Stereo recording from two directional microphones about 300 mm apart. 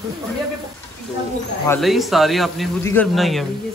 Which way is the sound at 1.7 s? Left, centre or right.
Centre.